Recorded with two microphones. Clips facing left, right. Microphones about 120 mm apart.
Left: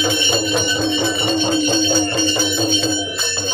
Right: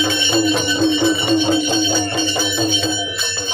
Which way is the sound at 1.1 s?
10° right (ahead or behind).